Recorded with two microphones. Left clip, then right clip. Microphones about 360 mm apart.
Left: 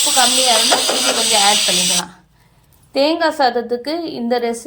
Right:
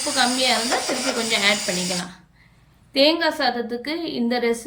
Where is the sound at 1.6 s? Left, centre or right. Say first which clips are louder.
Left 9 dB; centre.